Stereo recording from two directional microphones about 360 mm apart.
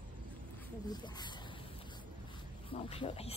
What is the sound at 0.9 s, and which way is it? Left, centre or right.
Speech, centre.